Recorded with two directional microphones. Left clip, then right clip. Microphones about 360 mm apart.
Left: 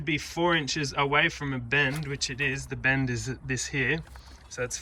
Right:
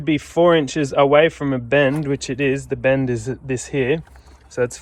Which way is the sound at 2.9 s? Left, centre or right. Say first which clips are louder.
Right 8 dB; right.